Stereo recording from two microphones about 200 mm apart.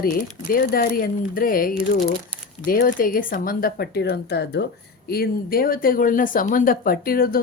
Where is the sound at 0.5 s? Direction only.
45° left (ahead or behind).